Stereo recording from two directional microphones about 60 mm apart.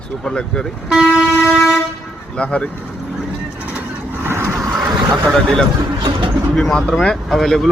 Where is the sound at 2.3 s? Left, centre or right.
Centre.